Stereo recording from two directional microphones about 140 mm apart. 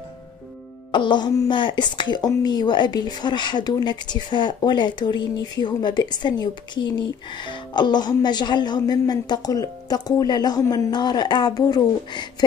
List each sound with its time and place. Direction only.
0.9 s speech: 35° left (ahead or behind)